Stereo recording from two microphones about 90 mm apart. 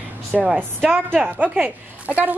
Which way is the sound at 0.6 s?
20° right (ahead or behind).